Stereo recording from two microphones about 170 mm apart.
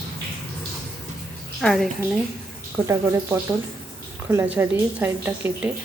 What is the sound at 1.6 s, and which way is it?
Speech, 5° left (ahead or behind).